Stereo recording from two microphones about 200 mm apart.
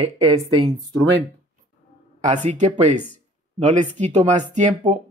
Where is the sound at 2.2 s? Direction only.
40° right (ahead or behind).